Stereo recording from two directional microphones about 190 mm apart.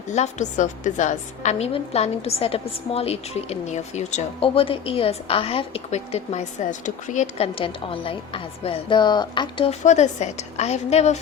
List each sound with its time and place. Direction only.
0.1 s a woman's voice: 40° left (ahead or behind)
9.8 s a woman's voice: 35° left (ahead or behind)